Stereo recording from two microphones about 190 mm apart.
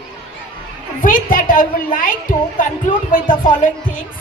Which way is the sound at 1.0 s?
45° left (ahead or behind).